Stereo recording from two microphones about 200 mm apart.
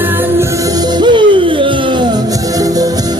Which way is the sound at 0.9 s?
25° right (ahead or behind).